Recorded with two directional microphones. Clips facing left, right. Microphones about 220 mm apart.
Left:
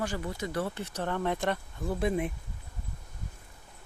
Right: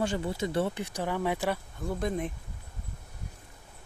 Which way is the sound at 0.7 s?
10° right (ahead or behind).